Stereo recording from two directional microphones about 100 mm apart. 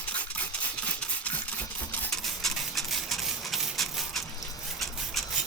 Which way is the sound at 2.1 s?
5° left (ahead or behind).